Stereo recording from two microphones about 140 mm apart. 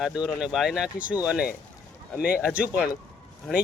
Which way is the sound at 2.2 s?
90° left.